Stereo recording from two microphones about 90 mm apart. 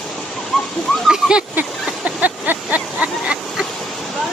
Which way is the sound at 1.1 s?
10° right (ahead or behind).